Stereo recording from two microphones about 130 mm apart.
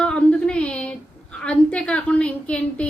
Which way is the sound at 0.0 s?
10° left (ahead or behind).